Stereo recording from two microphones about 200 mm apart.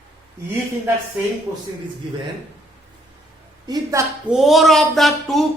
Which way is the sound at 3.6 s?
15° right (ahead or behind).